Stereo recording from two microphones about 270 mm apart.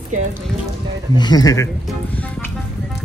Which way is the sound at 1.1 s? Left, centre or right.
Centre.